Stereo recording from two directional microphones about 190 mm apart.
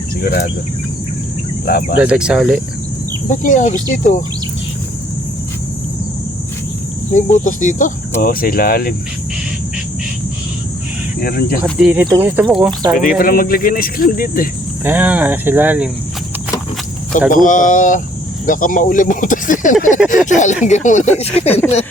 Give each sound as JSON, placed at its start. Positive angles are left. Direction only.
{"t": 0.2, "sound": "speech", "side_deg": 60}
{"t": 1.6, "sound": "speech", "side_deg": 55}
{"t": 2.0, "sound": "speech", "side_deg": -5}
{"t": 3.2, "sound": "speech", "side_deg": 40}
{"t": 7.1, "sound": "speech", "side_deg": 40}
{"t": 11.2, "sound": "speech", "side_deg": 50}
{"t": 11.6, "sound": "speech", "side_deg": -10}
{"t": 13.0, "sound": "speech", "side_deg": 45}
{"t": 14.8, "sound": "speech", "side_deg": -10}
{"t": 17.2, "sound": "speech", "side_deg": 45}